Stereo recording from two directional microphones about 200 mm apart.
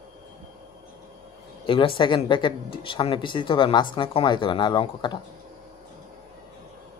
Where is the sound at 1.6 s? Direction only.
25° left (ahead or behind).